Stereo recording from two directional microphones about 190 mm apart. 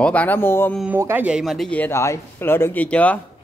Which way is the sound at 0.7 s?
10° right (ahead or behind).